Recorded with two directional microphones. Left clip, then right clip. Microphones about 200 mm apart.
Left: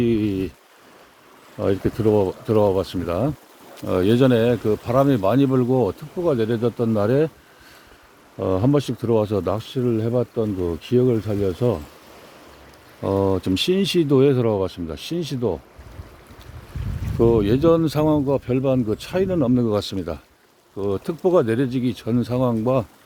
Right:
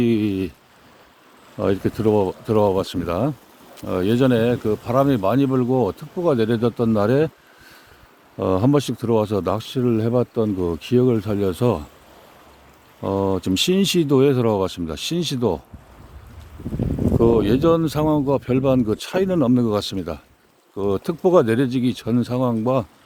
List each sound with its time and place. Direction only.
0.0 s a sound: 20° right (ahead or behind)
1.5 s speech: 20° right (ahead or behind)
3.8 s speech: centre (ahead or behind)
6.2 s speech: 30° right (ahead or behind)
8.4 s speech: 25° right (ahead or behind)
13.0 s speech: 10° right (ahead or behind); by 15.6 s 30° right (ahead or behind)
17.2 s speech: 15° right (ahead or behind)
18.3 s speech: 25° right (ahead or behind); by 20.2 s 10° right (ahead or behind)
20.7 s speech: 30° right (ahead or behind)